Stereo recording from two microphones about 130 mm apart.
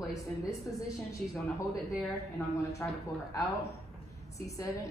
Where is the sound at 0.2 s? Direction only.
25° left (ahead or behind).